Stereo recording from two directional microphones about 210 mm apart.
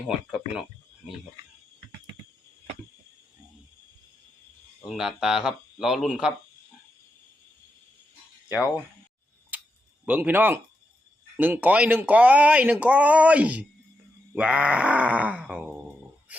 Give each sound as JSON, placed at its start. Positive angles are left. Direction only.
{"t": 0.1, "sound": "speech", "side_deg": -5}
{"t": 4.8, "sound": "speech", "side_deg": 0}
{"t": 9.5, "sound": "a sound", "side_deg": -10}
{"t": 10.1, "sound": "speech", "side_deg": -10}